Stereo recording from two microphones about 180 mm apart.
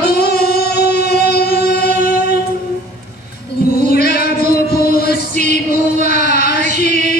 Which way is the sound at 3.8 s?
60° left (ahead or behind).